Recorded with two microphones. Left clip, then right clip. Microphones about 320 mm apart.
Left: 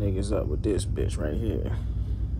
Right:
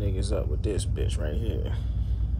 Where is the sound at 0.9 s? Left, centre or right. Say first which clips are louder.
Left 3 dB; left.